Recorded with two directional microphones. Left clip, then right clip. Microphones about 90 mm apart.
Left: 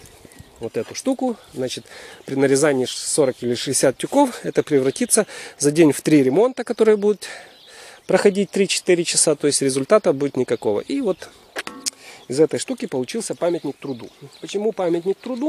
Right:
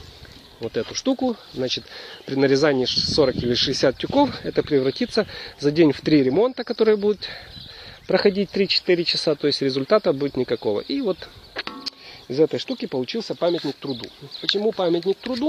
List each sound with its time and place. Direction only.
0.7 s speech: 20° left (ahead or behind)
2.0 s speech: 35° left (ahead or behind)
3.3 s speech: 20° left (ahead or behind)
3.7 s speech: 40° left (ahead or behind)
11.8 s music: 70° left (ahead or behind)
12.6 s speech: 45° left (ahead or behind)
13.4 s speech: 30° left (ahead or behind)
14.6 s speech: 20° left (ahead or behind)